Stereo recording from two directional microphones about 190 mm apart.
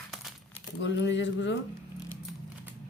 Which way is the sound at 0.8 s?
70° left (ahead or behind).